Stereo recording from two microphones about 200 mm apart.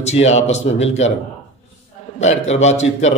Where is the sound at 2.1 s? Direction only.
35° left (ahead or behind).